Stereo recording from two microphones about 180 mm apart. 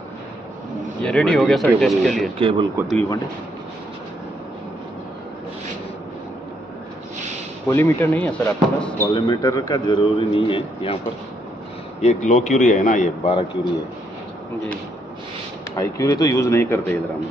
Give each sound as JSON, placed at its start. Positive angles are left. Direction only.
{"t": 1.0, "sound": "speech", "side_deg": 5}
{"t": 2.3, "sound": "speech", "side_deg": -30}
{"t": 7.6, "sound": "speech", "side_deg": 10}
{"t": 9.1, "sound": "a man's voice", "side_deg": 25}
{"t": 12.0, "sound": "a man's voice", "side_deg": 40}
{"t": 15.7, "sound": "speech", "side_deg": 20}